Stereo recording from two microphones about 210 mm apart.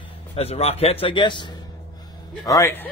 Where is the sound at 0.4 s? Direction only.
30° left (ahead or behind); by 2.9 s 10° left (ahead or behind).